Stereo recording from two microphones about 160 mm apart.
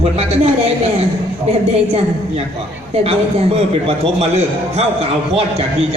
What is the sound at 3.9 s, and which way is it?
Speech, 40° right (ahead or behind).